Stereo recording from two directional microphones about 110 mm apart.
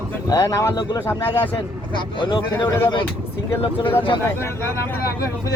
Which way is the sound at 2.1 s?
45° left (ahead or behind).